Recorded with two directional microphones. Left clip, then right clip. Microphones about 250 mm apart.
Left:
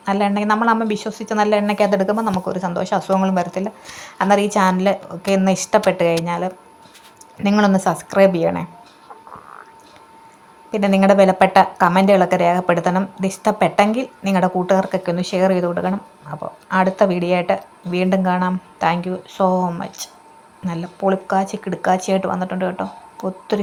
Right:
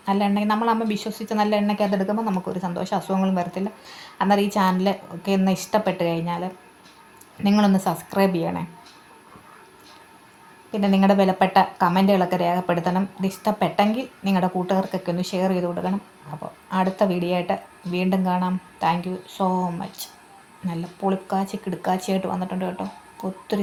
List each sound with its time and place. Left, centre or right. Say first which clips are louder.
0.0 s a woman's voice: left 4 dB; centre
10.7 s a woman's voice: left 6 dB; left